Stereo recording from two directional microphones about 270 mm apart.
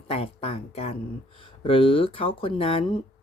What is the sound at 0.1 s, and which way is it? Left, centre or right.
Speech, left.